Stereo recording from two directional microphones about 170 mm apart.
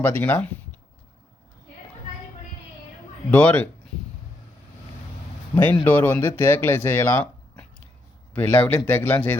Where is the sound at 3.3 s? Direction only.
10° left (ahead or behind).